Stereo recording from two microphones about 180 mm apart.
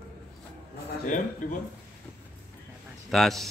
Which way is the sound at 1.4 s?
50° left (ahead or behind).